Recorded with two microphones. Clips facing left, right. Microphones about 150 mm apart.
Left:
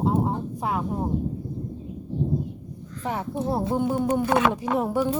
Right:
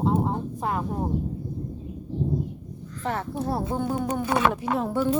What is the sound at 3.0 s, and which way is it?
Speech, 15° left (ahead or behind).